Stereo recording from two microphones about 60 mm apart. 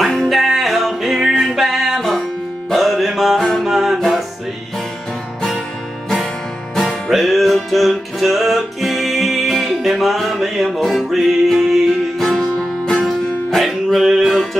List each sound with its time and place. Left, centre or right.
0.0 s music: centre
6.7 s music: centre
12.3 s music: centre